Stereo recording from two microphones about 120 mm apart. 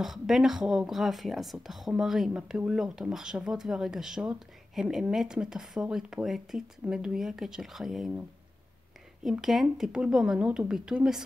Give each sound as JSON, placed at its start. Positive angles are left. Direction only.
{"t": 0.0, "sound": "speech", "side_deg": -5}
{"t": 9.2, "sound": "speech", "side_deg": -5}